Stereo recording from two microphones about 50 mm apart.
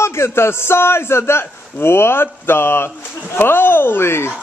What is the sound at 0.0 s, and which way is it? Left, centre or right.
A man's voice, left.